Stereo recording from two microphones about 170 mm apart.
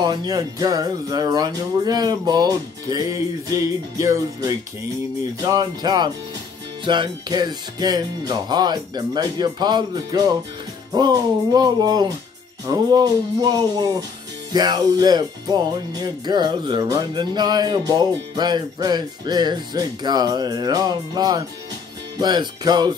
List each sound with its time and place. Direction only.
0.0 s music: 25° right (ahead or behind)